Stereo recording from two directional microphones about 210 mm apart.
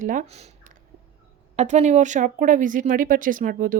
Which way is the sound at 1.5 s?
35° right (ahead or behind).